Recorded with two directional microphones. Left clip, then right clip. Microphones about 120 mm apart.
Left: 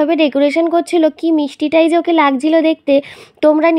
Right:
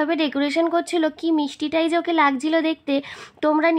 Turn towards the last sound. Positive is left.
turn(degrees=45)  # may be behind; listen again after turning